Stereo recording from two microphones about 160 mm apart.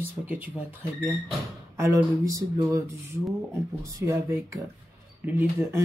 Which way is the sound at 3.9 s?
20° right (ahead or behind).